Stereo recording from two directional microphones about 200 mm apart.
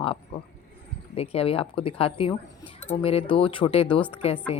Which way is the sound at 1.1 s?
30° left (ahead or behind).